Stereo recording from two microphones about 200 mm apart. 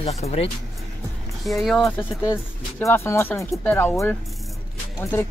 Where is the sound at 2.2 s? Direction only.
15° left (ahead or behind).